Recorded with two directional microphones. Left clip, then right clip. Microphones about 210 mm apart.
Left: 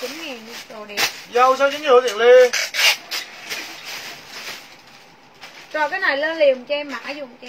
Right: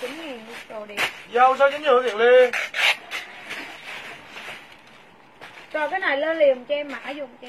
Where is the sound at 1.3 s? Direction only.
20° right (ahead or behind).